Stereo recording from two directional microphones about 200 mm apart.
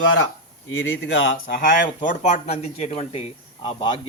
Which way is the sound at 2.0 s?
35° left (ahead or behind).